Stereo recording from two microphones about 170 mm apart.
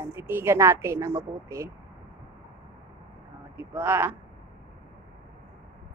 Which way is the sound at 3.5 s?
10° right (ahead or behind).